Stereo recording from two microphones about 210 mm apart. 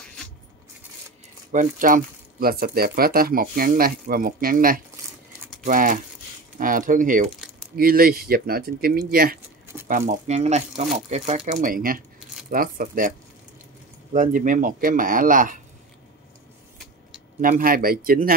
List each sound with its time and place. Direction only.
1.5 s speech: 40° right (ahead or behind)
5.4 s a sound: centre (ahead or behind)
5.7 s speech: 40° right (ahead or behind)
14.1 s speech: 40° right (ahead or behind)
16.7 s vehicle: centre (ahead or behind)
17.4 s speech: 40° right (ahead or behind)